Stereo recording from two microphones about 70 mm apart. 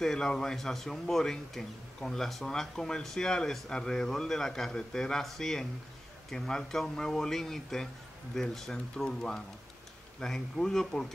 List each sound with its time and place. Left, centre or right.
0.0 s a man's voice: centre